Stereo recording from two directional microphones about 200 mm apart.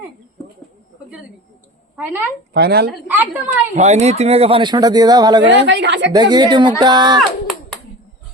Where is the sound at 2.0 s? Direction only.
10° right (ahead or behind).